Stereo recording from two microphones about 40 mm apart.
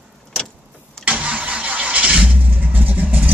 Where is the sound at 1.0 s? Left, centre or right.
Right.